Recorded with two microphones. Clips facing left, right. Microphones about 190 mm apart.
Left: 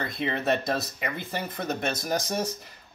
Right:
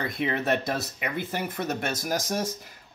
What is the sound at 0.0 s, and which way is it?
Speech, 10° right (ahead or behind).